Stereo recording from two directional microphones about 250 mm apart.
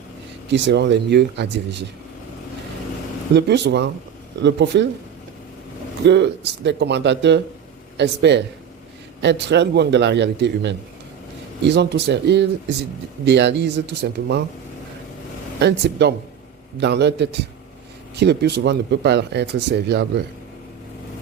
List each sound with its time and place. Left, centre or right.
0.5 s speech: right
3.3 s speech: right
6.1 s speech: right
15.6 s speech: right